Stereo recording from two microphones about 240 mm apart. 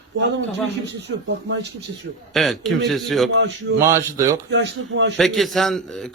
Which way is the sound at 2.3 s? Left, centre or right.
Centre.